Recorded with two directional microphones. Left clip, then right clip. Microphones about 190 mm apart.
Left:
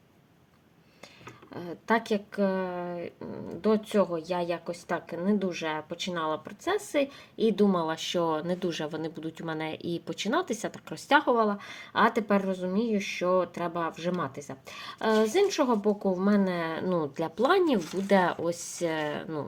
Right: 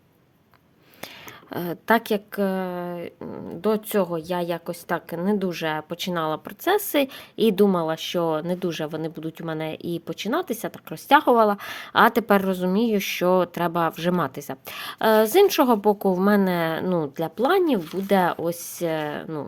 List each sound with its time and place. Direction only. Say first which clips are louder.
1.0 s a woman's voice: right 9 dB; 55° right (ahead or behind); by 19.5 s 25° right (ahead or behind)